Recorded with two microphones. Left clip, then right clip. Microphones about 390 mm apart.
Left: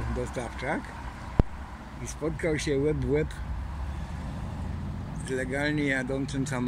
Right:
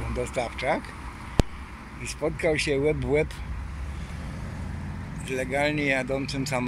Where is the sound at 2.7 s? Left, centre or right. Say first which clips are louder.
Right 3 dB; right.